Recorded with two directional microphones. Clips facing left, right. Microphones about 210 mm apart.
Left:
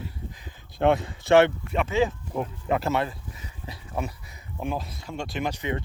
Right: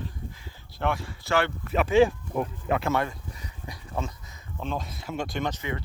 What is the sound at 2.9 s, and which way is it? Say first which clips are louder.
Speech: even; 25° left (ahead or behind).